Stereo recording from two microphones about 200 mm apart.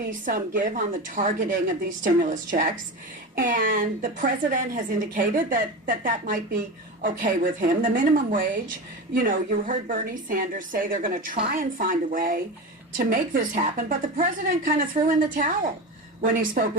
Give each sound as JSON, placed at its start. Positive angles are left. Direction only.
{"t": 0.1, "sound": "a woman's voice", "side_deg": -45}